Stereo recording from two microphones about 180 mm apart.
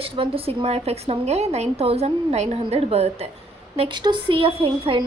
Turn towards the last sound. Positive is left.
turn(degrees=-30)  # may be behind; listen again after turning